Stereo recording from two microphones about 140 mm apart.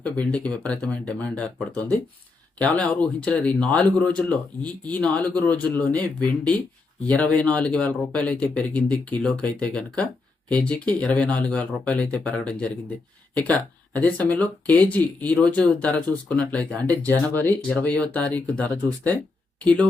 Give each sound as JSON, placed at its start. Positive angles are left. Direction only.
{"t": 0.0, "sound": "speech", "side_deg": 10}